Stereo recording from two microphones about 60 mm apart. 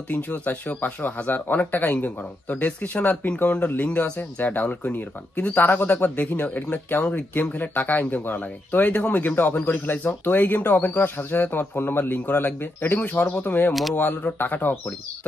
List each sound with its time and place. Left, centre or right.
0.1 s speech: left